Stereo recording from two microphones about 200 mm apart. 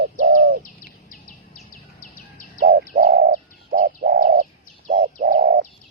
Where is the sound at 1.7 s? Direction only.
40° left (ahead or behind).